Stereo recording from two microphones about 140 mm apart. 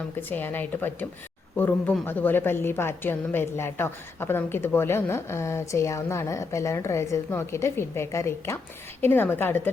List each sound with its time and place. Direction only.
0.2 s speech: 15° left (ahead or behind)